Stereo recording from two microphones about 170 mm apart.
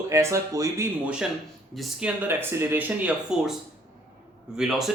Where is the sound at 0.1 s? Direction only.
15° right (ahead or behind).